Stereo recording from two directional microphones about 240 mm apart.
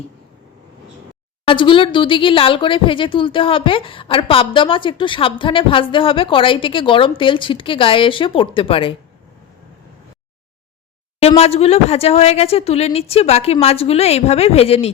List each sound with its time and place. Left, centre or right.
1.5 s speech: left
11.2 s speech: left